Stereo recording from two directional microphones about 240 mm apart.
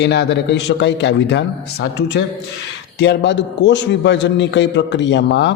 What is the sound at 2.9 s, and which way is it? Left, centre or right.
A man's voice, left.